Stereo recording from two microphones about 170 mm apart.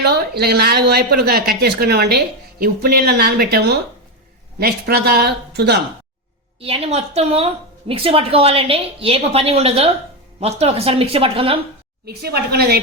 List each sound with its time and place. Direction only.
0.0 s speech: 70° right (ahead or behind)
6.6 s a woman's voice: 35° right (ahead or behind)
12.0 s speech: 70° right (ahead or behind)